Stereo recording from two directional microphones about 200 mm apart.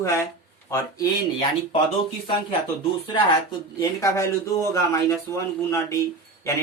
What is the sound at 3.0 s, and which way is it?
A man's voice, 25° left (ahead or behind).